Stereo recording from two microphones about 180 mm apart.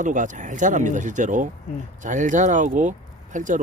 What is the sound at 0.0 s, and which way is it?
Speech, 45° right (ahead or behind).